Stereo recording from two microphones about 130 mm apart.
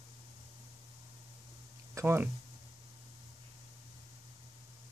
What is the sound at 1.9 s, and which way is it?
Speech, 20° right (ahead or behind).